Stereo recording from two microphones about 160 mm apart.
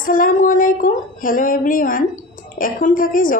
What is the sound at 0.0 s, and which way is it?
A woman's voice, 60° left (ahead or behind).